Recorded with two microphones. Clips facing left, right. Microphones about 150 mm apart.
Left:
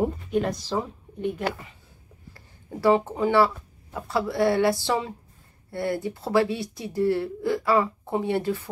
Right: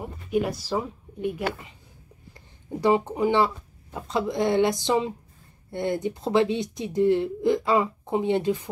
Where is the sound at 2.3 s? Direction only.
15° right (ahead or behind).